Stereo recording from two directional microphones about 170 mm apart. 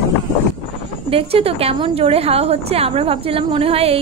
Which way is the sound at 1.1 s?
35° right (ahead or behind).